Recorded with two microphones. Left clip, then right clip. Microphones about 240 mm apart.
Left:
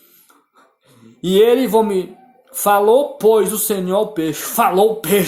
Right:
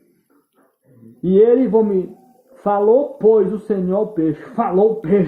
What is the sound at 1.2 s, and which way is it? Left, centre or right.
Speech, left.